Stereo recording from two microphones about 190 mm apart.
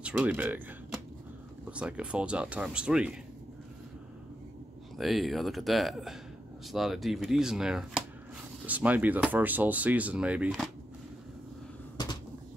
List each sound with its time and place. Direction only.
0.0 s speech: 5° right (ahead or behind)
4.9 s speech: centre (ahead or behind)
12.0 s cupboard open or close: 20° left (ahead or behind)